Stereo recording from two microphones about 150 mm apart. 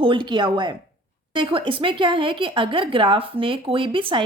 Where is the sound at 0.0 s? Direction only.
35° right (ahead or behind).